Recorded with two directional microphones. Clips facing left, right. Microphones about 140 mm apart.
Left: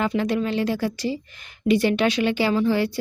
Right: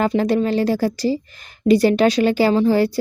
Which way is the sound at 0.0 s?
35° right (ahead or behind).